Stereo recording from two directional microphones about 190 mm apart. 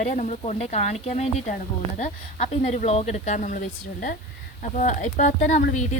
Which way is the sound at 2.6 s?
35° left (ahead or behind).